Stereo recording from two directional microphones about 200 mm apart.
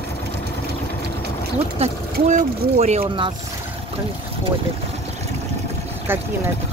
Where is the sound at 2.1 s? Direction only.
35° right (ahead or behind).